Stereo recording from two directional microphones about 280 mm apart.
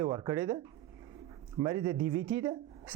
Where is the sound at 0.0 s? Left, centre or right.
Centre.